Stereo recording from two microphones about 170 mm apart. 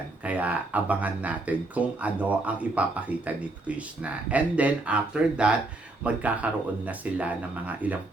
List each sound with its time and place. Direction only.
0.3 s speech: 10° right (ahead or behind)